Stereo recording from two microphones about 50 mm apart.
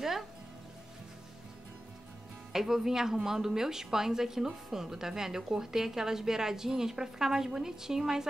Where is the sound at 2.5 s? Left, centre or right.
Centre.